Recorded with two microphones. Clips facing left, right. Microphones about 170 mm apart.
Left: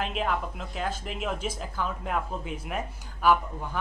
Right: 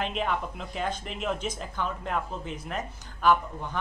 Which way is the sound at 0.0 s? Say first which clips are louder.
Even; 5° left (ahead or behind).